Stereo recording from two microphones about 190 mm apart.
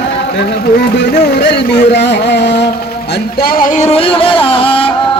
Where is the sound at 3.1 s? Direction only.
55° left (ahead or behind).